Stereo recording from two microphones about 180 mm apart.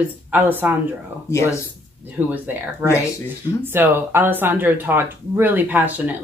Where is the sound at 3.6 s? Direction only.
10° right (ahead or behind).